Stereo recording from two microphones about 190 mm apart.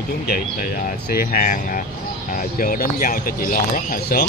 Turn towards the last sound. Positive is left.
turn(degrees=50)  # may be behind; listen again after turning